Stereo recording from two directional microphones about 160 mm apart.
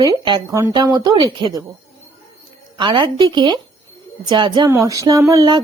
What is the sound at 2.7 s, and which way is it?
Speech, 25° right (ahead or behind).